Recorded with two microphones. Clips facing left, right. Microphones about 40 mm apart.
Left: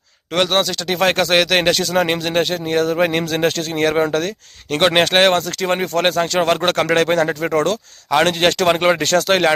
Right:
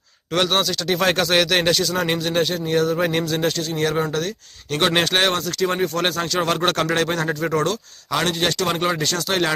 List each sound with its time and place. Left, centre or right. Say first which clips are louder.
0.3 s speech: left 3 dB; centre; by 4.3 s left
4.7 s speech: left 4 dB; left
6.9 s speech: left 6 dB; left
8.2 s speech: left 6 dB; left